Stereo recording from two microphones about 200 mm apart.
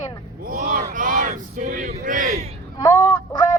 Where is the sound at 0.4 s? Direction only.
45° right (ahead or behind).